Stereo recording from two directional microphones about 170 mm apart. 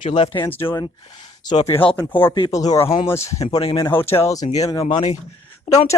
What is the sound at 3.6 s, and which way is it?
Speech, 35° left (ahead or behind).